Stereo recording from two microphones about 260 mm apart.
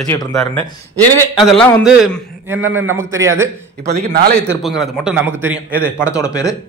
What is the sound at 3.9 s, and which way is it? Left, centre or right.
Speech, right.